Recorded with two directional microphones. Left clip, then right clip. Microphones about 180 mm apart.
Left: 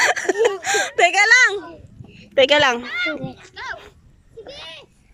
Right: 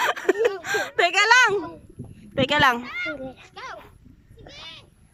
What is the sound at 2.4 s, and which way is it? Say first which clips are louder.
Speech: left 5 dB; centre (ahead or behind).